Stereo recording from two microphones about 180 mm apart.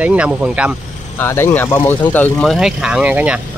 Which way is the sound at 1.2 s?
15° left (ahead or behind).